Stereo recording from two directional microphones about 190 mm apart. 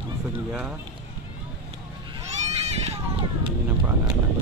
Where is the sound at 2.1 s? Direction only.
35° right (ahead or behind).